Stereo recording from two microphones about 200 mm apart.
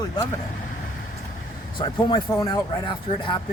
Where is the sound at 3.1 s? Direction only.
35° left (ahead or behind).